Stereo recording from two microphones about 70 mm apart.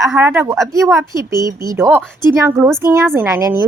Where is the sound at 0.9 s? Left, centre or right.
Right.